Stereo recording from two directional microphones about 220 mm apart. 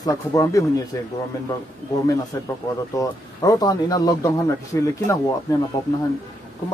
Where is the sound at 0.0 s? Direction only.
15° left (ahead or behind).